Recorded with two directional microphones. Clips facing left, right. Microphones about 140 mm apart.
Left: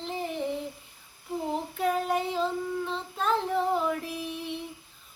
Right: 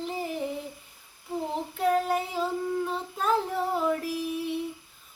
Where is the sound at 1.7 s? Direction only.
Centre (ahead or behind).